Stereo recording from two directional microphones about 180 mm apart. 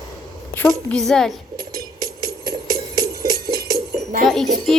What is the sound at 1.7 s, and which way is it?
Music, 20° right (ahead or behind).